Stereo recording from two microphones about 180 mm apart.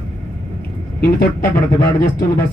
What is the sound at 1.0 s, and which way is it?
Speech, 60° left (ahead or behind).